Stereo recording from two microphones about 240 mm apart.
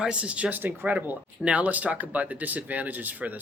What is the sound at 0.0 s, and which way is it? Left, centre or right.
Speech, centre.